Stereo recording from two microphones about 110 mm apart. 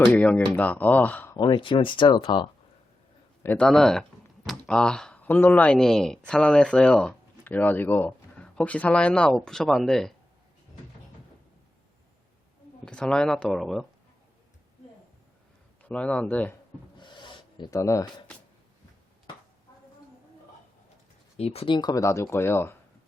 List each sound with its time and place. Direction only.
0.1 s speech: 15° left (ahead or behind)
1.4 s speech: 45° left (ahead or behind)
3.4 s a man's voice: 15° left (ahead or behind)
3.7 s speech: 5° left (ahead or behind)
12.8 s speech: 10° left (ahead or behind)
15.8 s speech: 10° left (ahead or behind)
17.0 s a sound: 45° left (ahead or behind)
17.7 s speech: 30° left (ahead or behind)
21.3 s speech: 65° left (ahead or behind)
21.8 s speech: 35° left (ahead or behind)